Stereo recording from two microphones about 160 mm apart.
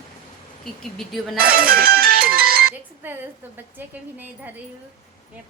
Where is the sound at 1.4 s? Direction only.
65° right (ahead or behind).